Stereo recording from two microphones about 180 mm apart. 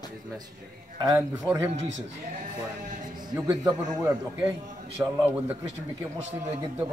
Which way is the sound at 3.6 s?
15° right (ahead or behind).